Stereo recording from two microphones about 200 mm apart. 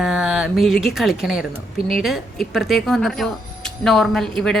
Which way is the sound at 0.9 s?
Centre (ahead or behind).